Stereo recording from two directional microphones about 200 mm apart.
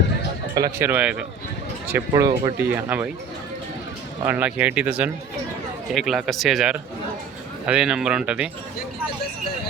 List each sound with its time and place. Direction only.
0.5 s speech: 15° right (ahead or behind)
4.3 s speech: 5° right (ahead or behind)